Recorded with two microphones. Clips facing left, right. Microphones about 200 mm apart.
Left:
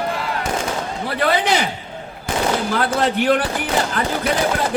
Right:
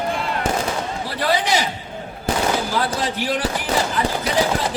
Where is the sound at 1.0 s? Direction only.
60° left (ahead or behind).